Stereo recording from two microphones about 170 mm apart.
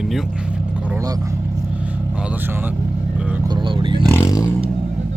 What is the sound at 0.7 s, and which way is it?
Vehicle, 10° right (ahead or behind).